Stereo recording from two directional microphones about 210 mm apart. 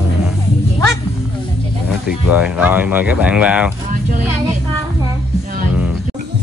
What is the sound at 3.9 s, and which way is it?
Speech, 40° right (ahead or behind).